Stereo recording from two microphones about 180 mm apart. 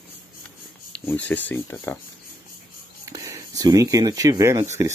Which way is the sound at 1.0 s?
10° left (ahead or behind).